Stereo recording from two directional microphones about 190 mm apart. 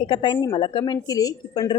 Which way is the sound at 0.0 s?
25° left (ahead or behind).